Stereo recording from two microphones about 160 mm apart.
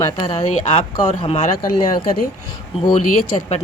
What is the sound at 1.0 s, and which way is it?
Speech, 40° left (ahead or behind).